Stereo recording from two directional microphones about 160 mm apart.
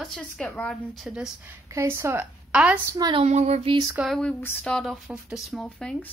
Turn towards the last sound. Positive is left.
turn(degrees=5)  # may be behind; listen again after turning